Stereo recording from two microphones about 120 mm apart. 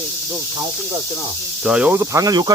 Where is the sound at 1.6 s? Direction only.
5° right (ahead or behind).